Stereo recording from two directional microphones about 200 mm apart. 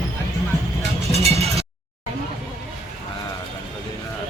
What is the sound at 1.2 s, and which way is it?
Cowbell, 30° right (ahead or behind).